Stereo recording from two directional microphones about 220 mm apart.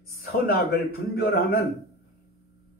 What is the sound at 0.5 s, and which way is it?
Speech, 45° left (ahead or behind).